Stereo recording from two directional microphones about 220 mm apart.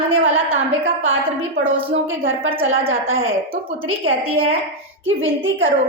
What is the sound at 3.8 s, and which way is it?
Speech, 70° right (ahead or behind).